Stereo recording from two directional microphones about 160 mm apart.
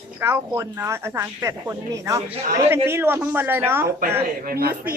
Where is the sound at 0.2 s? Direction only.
15° right (ahead or behind).